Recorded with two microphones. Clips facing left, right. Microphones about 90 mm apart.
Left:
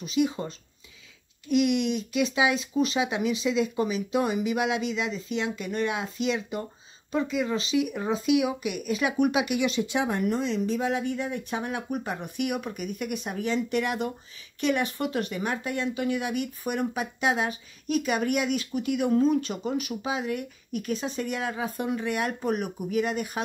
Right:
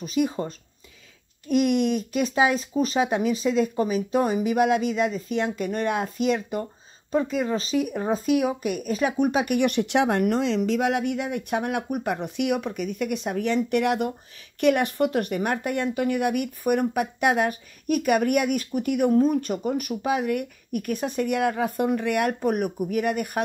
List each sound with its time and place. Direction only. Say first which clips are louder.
0.0 s speech: right 1 dB; 45° right (ahead or behind); by 12.7 s 60° right (ahead or behind)
12.7 s speech: right 4 dB; 50° left (ahead or behind)
13.0 s speech: right 5 dB; 60° right (ahead or behind)